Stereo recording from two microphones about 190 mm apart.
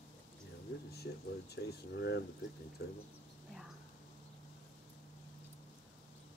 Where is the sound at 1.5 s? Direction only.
60° left (ahead or behind).